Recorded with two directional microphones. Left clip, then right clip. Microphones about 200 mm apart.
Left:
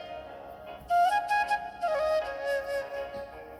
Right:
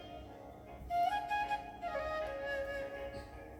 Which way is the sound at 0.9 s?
50° left (ahead or behind).